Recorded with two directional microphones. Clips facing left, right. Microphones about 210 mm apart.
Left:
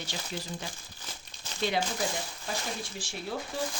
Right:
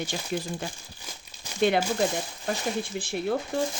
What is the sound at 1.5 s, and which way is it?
Crumpling, 15° right (ahead or behind).